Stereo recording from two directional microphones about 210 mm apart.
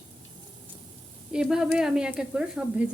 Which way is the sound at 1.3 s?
5° right (ahead or behind).